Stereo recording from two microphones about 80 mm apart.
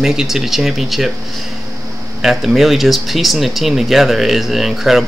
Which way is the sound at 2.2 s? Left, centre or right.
Centre.